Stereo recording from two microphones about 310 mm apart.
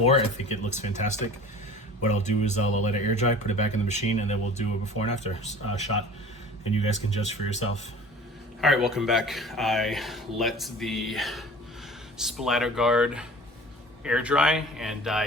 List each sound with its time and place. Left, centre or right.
0.0 s speech: centre
7.2 s speech: centre
8.6 s speech: centre